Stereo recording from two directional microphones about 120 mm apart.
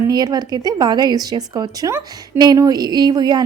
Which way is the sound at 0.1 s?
35° right (ahead or behind).